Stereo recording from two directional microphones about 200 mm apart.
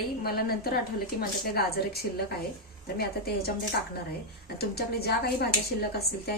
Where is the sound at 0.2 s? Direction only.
50° left (ahead or behind).